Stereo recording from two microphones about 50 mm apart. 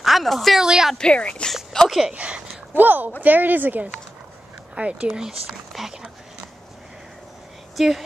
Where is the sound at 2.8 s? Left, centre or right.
Right.